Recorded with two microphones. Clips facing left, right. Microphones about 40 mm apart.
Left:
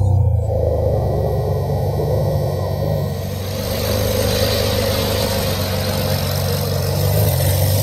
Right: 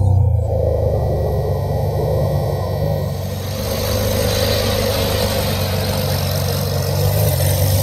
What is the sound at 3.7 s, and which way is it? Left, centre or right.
Vehicle, centre.